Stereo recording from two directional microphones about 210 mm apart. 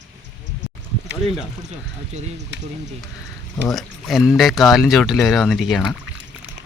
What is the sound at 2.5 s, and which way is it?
Speech, 55° right (ahead or behind).